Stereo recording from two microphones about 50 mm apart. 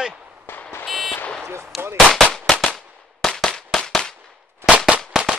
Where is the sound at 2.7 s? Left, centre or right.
Centre.